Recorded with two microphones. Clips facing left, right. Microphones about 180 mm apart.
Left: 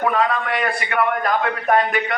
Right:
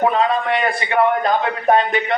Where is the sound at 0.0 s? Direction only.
25° right (ahead or behind).